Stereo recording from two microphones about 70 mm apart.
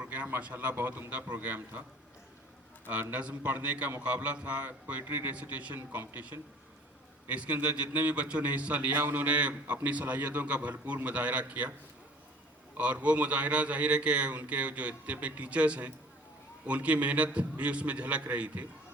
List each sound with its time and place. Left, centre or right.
0.0 s a man's voice: right
2.9 s a man's voice: right
12.7 s a man's voice: centre